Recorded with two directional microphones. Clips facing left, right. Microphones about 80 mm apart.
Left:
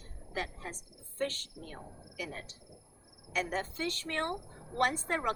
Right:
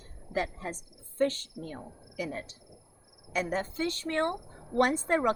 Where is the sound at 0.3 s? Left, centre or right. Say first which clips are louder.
Right 6 dB; right.